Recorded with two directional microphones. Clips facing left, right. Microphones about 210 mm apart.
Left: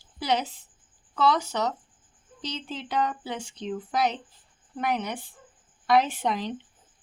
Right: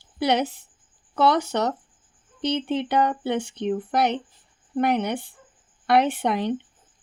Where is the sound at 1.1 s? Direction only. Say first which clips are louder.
Right 4 dB; 65° right (ahead or behind).